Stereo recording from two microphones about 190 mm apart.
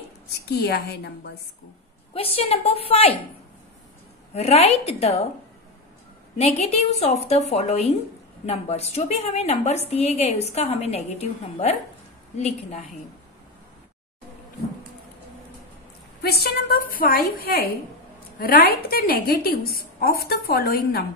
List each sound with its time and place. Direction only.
0.5 s a woman's voice: 60° left (ahead or behind)
2.1 s a woman's voice: 30° left (ahead or behind)
4.3 s a woman's voice: 35° left (ahead or behind)
6.3 s a woman's voice: 35° left (ahead or behind)
16.2 s a woman's voice: 55° left (ahead or behind)